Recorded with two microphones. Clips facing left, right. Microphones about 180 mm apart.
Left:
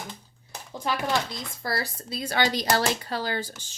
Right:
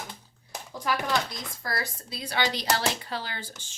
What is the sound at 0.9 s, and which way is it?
Speech, 25° left (ahead or behind).